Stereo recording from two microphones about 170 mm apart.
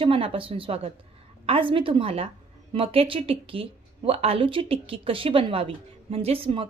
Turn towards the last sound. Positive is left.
turn(degrees=-30)  # may be behind; listen again after turning